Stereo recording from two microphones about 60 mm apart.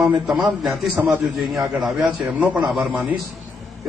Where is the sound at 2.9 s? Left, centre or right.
Right.